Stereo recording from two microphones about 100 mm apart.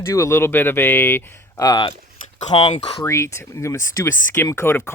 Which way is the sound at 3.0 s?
30° left (ahead or behind).